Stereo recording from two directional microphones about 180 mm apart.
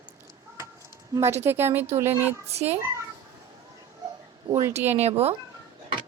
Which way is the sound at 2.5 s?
35° right (ahead or behind).